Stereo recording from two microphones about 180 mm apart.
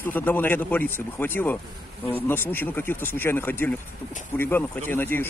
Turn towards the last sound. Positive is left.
turn(degrees=10)  # may be behind; listen again after turning